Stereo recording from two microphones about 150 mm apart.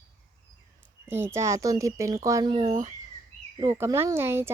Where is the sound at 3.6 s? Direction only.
15° right (ahead or behind).